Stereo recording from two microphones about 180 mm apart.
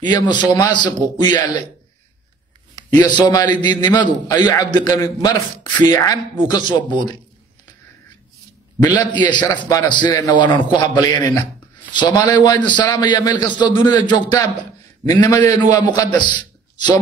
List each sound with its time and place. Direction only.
0.0 s a man's voice: 25° left (ahead or behind)
3.0 s a man's voice: 25° left (ahead or behind)
8.8 s a man's voice: 25° left (ahead or behind)